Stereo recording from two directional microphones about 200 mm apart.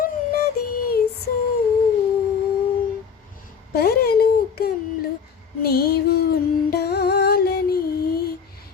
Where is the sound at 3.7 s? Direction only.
50° left (ahead or behind).